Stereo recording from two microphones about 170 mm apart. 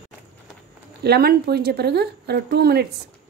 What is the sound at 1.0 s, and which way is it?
Speech, 70° right (ahead or behind).